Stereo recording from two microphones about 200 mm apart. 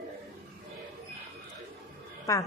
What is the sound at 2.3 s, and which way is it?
Speech, 15° left (ahead or behind).